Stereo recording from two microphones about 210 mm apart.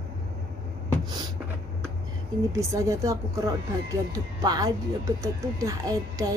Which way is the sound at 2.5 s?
15° right (ahead or behind).